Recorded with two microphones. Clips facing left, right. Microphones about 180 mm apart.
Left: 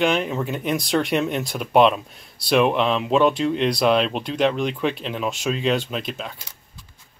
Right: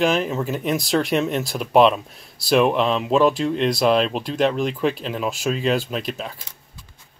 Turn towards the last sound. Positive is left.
turn(degrees=0)  # may be behind; listen again after turning